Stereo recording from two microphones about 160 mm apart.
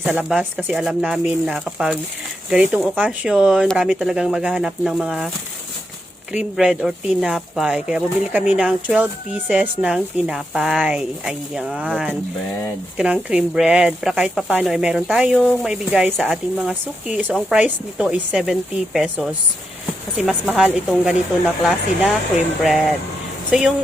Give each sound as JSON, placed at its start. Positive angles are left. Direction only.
{"t": 0.0, "sound": "speech", "side_deg": -5}
{"t": 6.3, "sound": "speech", "side_deg": -5}